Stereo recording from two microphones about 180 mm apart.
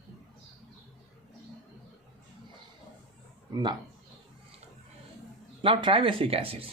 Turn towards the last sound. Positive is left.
turn(degrees=-30)  # may be behind; listen again after turning